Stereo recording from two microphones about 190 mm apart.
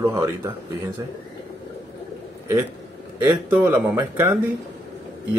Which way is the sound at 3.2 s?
10° right (ahead or behind).